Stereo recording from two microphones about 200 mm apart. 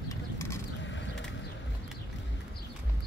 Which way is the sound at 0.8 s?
65° left (ahead or behind).